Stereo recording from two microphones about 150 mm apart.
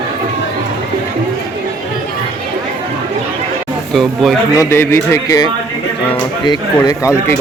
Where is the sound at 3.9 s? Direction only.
Centre (ahead or behind).